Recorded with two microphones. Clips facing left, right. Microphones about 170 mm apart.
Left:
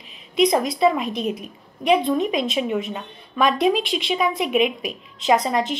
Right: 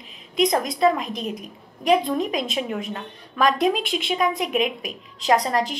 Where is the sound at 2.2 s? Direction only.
40° right (ahead or behind).